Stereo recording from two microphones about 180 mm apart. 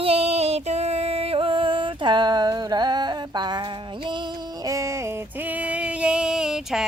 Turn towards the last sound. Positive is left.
turn(degrees=-5)  # may be behind; listen again after turning